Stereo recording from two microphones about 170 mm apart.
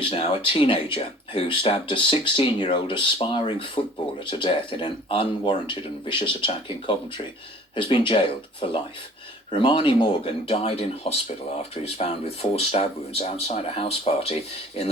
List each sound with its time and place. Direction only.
0.0 s speech: 35° left (ahead or behind)